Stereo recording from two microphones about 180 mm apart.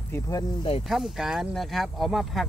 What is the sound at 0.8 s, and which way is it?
Speech, centre (ahead or behind).